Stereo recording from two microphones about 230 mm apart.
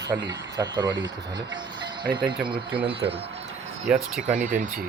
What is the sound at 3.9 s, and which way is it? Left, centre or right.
Speech, centre.